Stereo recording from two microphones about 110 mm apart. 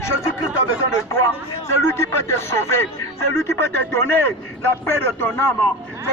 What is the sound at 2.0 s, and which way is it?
Speech, 25° left (ahead or behind).